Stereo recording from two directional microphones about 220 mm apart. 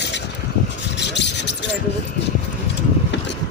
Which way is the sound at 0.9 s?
50° left (ahead or behind).